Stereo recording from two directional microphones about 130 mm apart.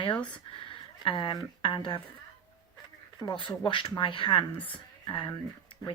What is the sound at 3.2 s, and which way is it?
Speech, 35° left (ahead or behind).